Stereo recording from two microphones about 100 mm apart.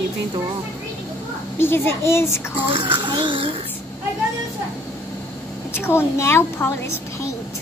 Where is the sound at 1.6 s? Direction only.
25° left (ahead or behind).